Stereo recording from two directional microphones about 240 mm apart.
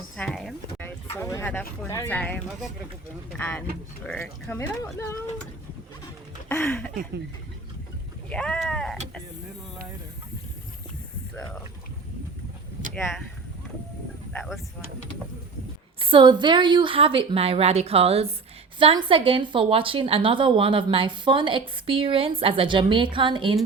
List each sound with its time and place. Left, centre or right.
0.2 s a sound: centre
1.1 s speech: centre
6.5 s speech: centre
8.3 s speech: centre
14.3 s speech: centre
16.0 s speech: right